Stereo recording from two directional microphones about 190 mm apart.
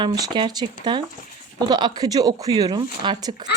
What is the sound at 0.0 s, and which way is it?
Speech, 20° right (ahead or behind).